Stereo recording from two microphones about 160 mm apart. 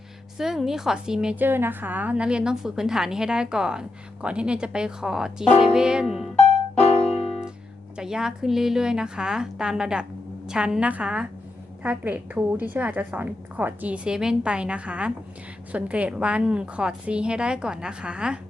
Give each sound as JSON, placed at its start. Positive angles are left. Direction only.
{"t": 0.3, "sound": "a woman's voice", "side_deg": 0}
{"t": 6.7, "sound": "music", "side_deg": 40}
{"t": 7.9, "sound": "a woman's voice", "side_deg": -5}